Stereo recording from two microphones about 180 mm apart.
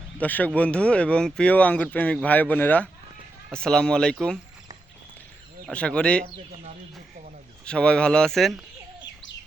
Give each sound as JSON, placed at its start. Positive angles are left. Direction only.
{"t": 0.2, "sound": "speech", "side_deg": 10}
{"t": 5.6, "sound": "speech", "side_deg": 5}
{"t": 6.2, "sound": "speech", "side_deg": -40}
{"t": 7.6, "sound": "speech", "side_deg": 5}